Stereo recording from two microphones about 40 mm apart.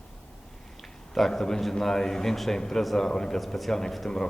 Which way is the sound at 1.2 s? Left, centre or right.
Centre.